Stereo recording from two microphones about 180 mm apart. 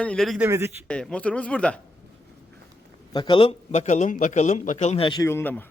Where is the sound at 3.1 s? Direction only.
25° left (ahead or behind).